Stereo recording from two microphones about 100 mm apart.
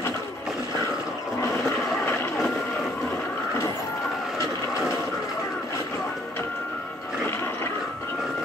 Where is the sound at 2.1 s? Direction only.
25° left (ahead or behind).